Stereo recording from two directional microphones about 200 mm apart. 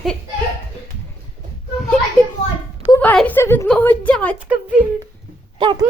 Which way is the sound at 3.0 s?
5° left (ahead or behind).